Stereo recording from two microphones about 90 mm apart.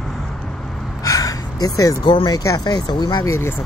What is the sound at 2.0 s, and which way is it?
Speech, 75° left (ahead or behind).